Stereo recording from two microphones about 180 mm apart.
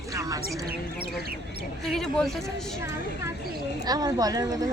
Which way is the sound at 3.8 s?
20° right (ahead or behind).